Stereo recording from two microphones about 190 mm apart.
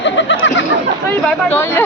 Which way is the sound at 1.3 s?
10° left (ahead or behind).